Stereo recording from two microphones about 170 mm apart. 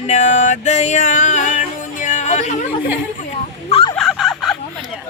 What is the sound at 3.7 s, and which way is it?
Turkey, 35° left (ahead or behind).